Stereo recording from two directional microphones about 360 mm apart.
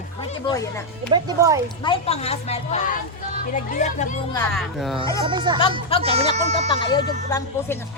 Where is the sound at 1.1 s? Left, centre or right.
Centre.